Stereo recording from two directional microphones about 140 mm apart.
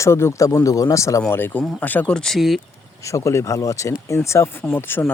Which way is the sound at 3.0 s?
20° left (ahead or behind).